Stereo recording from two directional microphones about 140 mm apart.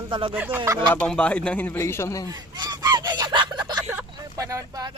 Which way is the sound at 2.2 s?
30° right (ahead or behind).